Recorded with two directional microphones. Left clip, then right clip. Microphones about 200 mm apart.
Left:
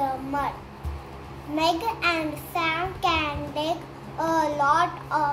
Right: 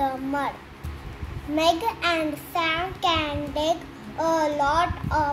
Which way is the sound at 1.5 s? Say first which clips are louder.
Right 2 dB; 15° right (ahead or behind).